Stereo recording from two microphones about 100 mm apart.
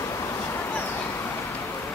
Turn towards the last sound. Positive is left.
turn(degrees=15)  # may be behind; listen again after turning